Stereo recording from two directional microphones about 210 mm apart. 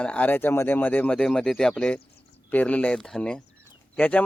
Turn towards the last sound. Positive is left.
turn(degrees=5)  # may be behind; listen again after turning